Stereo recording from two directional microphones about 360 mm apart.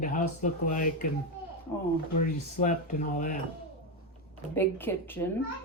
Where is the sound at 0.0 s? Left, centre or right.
Left.